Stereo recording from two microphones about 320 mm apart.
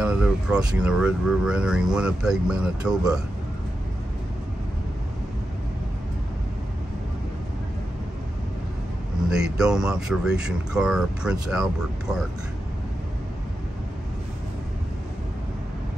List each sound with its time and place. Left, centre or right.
0.0 s speech: centre
9.3 s speech: centre